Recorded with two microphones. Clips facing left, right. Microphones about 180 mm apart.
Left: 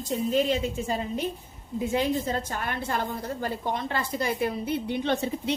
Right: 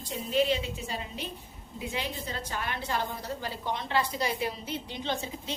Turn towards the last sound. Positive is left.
turn(degrees=60)  # may be behind; listen again after turning